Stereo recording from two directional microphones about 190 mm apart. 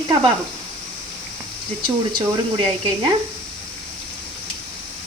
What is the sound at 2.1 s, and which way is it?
Speech, 25° right (ahead or behind).